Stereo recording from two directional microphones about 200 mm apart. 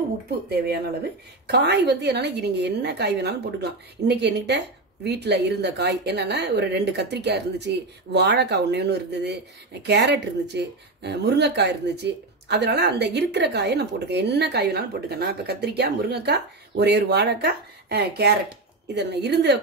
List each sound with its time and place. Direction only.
1.5 s speech: 55° right (ahead or behind)